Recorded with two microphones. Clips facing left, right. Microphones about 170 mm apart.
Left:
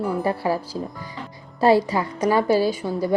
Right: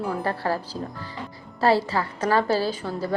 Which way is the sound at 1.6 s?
15° left (ahead or behind).